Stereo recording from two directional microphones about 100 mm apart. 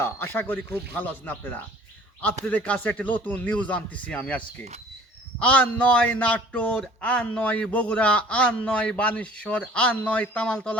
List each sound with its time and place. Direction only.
0.0 s speech: 20° left (ahead or behind)